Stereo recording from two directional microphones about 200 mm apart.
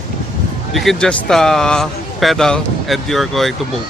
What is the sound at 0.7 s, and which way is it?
Speech, centre (ahead or behind).